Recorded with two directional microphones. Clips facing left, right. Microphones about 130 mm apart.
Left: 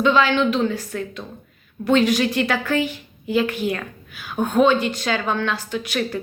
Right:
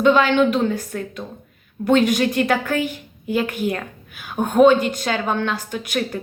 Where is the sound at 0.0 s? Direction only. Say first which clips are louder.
Right 2 dB; 50° right (ahead or behind).